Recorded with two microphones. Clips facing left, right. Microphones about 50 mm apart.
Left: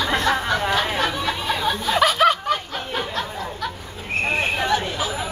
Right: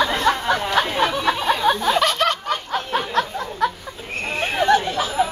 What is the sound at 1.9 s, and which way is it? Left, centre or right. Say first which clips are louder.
Snicker: left 2 dB; centre.